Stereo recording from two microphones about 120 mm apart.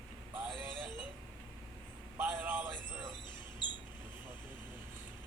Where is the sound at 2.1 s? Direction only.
15° right (ahead or behind).